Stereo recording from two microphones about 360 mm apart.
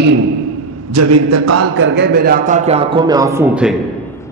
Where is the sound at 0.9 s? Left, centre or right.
Right.